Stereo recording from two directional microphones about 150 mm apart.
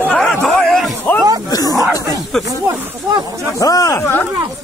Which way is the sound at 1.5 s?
25° left (ahead or behind).